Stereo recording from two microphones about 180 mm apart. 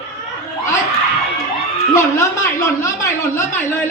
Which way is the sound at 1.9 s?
15° left (ahead or behind).